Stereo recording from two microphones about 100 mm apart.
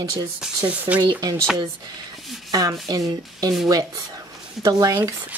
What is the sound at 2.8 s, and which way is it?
Speech, 40° right (ahead or behind).